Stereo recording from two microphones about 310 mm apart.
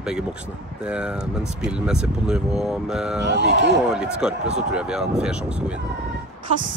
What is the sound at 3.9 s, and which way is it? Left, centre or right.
Speech, centre.